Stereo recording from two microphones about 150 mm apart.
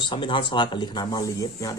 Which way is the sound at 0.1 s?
35° left (ahead or behind).